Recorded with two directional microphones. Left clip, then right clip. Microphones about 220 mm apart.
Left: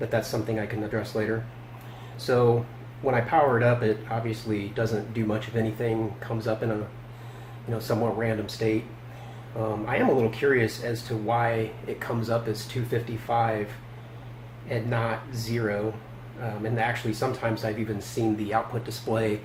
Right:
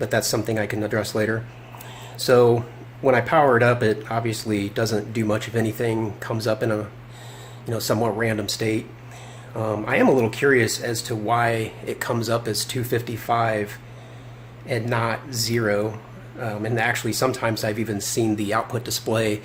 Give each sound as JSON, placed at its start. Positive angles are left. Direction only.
{"t": 0.0, "sound": "speech", "side_deg": -50}
{"t": 7.7, "sound": "speech", "side_deg": -45}
{"t": 9.8, "sound": "speech", "side_deg": -45}
{"t": 14.7, "sound": "speech", "side_deg": -45}